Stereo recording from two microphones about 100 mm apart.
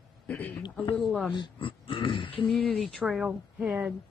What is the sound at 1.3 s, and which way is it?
Speech, 55° left (ahead or behind).